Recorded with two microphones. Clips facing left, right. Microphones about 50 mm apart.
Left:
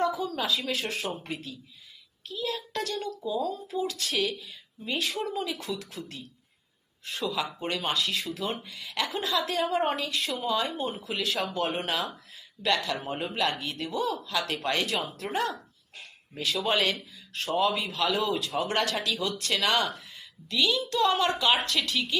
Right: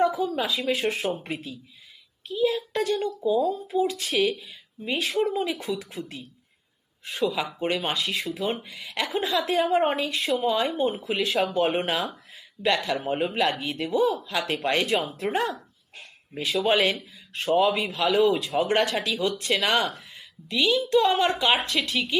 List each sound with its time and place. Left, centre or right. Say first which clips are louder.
0.3 s a child's voice: right 4 dB; centre
13.4 s speech: right 4 dB; centre
18.6 s speech: right 6 dB; right